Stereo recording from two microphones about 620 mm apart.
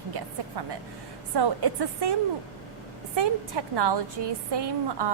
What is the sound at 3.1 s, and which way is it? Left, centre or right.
A woman's voice, right.